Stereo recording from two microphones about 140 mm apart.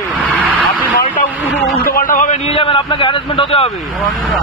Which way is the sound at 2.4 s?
40° left (ahead or behind).